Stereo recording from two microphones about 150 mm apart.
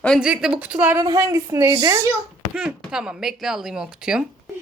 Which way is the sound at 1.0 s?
20° right (ahead or behind).